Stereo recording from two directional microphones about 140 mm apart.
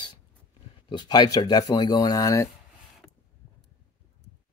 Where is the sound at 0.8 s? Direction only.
30° left (ahead or behind).